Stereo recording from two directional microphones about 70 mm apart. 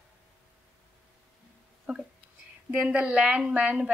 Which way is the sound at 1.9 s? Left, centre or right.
Right.